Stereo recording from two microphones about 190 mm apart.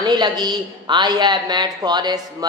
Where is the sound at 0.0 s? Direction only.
20° right (ahead or behind).